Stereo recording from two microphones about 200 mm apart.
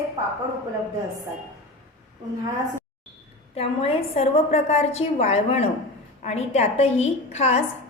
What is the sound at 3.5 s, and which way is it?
A woman's voice, 30° left (ahead or behind).